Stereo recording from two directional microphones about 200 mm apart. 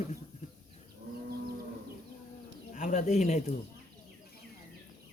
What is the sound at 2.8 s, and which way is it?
Speech, 40° left (ahead or behind).